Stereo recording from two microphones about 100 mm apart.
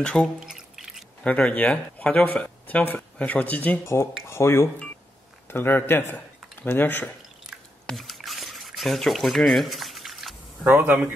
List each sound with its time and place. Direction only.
0.0 s speech: 10° left (ahead or behind)
0.5 s music: 5° right (ahead or behind)
1.2 s speech: 15° left (ahead or behind)
3.8 s speech: 25° left (ahead or behind)
7.8 s drip: centre (ahead or behind)
10.6 s speech: 20° right (ahead or behind)